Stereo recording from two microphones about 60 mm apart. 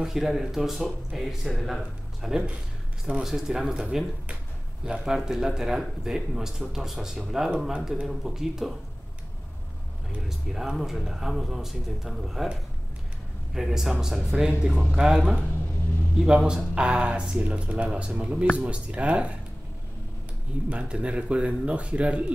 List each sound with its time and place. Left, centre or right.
0.0 s speech: centre
10.2 s speech: centre
13.6 s speech: centre
20.7 s speech: centre